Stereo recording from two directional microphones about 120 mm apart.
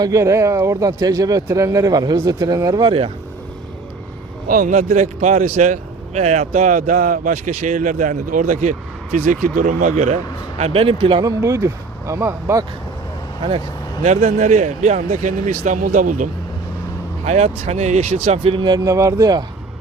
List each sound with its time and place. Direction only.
0.0 s speech: 25° right (ahead or behind)
4.6 s speech: 90° right
9.2 s speech: 90° right; by 10.2 s 70° right (ahead or behind)
10.6 s speech: 55° right (ahead or behind)
11.2 s speech: 30° right (ahead or behind)
14.0 s speech: 65° right (ahead or behind); by 16.3 s 90° right
17.2 s speech: 65° right (ahead or behind)
18.5 s speech: 40° right (ahead or behind)